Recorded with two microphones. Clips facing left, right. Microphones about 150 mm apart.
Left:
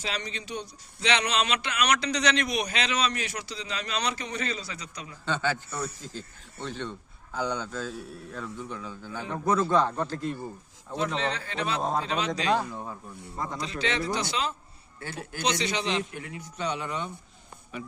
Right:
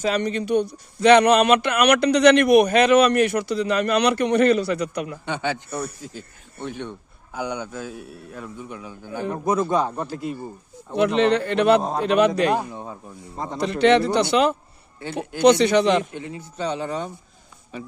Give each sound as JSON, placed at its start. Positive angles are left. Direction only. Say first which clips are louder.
{"t": 0.0, "sound": "speech", "louder": "right 12 dB", "side_deg": -55}
{"t": 5.2, "sound": "a man's voice", "louder": "left 3 dB", "side_deg": -15}
{"t": 10.9, "sound": "speech", "louder": "right 11 dB", "side_deg": -70}
{"t": 12.5, "sound": "speech", "louder": "right 3 dB", "side_deg": -20}
{"t": 13.6, "sound": "speech", "louder": "right 15 dB", "side_deg": -65}
{"t": 16.1, "sound": "speech", "louder": "right 6 dB", "side_deg": -25}